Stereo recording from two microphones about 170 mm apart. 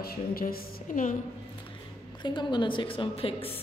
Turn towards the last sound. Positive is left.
turn(degrees=35)  # may be behind; listen again after turning